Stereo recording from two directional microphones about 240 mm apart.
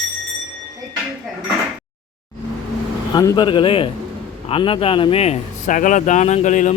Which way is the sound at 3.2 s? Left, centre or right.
Centre.